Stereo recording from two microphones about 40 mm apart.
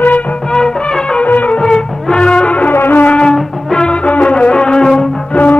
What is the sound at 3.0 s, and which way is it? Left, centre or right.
Music, left.